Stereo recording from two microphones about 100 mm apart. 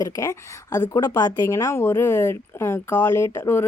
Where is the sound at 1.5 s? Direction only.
30° left (ahead or behind).